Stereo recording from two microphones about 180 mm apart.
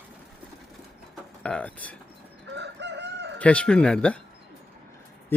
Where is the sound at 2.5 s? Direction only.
75° right (ahead or behind).